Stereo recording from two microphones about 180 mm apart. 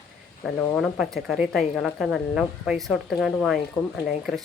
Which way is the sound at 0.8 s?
Centre (ahead or behind).